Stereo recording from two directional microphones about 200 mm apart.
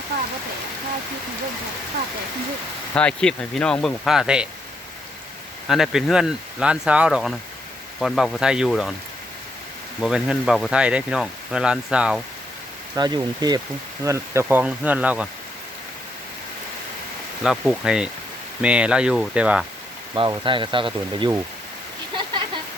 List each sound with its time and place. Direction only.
2.9 s speech: 5° left (ahead or behind)
5.6 s speech: centre (ahead or behind)
10.0 s speech: centre (ahead or behind)
13.0 s speech: 20° right (ahead or behind)
17.4 s speech: centre (ahead or behind)
20.1 s speech: 25° right (ahead or behind)